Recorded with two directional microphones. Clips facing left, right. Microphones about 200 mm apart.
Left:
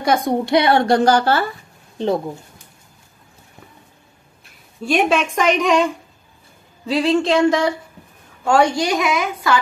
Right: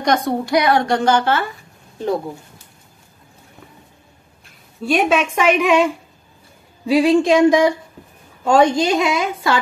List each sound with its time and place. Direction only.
0.0 s a woman's voice: 10° left (ahead or behind)
0.5 s a woman's voice: 30° left (ahead or behind)
4.8 s a woman's voice: centre (ahead or behind)
6.9 s a sound: 15° right (ahead or behind)
8.5 s a woman's voice: 20° right (ahead or behind)